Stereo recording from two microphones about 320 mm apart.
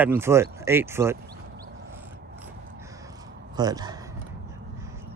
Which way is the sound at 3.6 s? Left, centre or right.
Centre.